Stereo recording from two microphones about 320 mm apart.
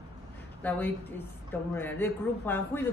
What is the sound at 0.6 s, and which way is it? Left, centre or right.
A woman's voice, centre.